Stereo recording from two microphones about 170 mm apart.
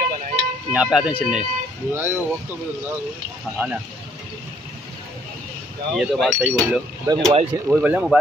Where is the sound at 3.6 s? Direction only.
10° right (ahead or behind).